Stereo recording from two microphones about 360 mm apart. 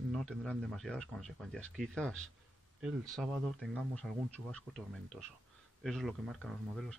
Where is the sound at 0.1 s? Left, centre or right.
Centre.